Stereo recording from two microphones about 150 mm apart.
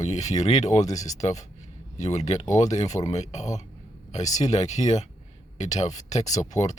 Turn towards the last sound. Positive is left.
turn(degrees=50)  # may be behind; listen again after turning